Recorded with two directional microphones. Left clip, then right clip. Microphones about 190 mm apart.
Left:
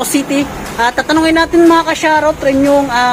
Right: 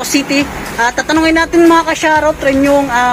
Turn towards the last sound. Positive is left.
turn(degrees=10)  # may be behind; listen again after turning